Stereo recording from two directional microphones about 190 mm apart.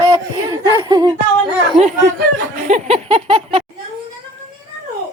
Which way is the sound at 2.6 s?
35° right (ahead or behind).